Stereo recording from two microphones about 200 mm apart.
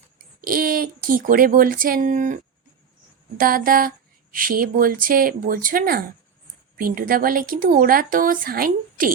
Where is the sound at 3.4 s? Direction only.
45° right (ahead or behind).